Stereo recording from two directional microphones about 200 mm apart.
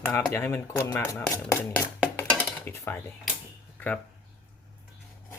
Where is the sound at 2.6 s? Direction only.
10° left (ahead or behind).